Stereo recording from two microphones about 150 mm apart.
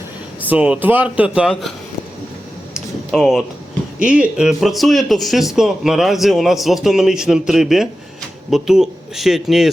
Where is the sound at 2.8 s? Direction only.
Centre (ahead or behind).